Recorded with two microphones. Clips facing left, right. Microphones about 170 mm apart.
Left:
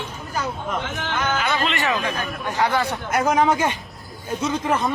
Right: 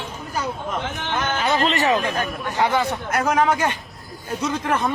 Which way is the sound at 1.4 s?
35° right (ahead or behind).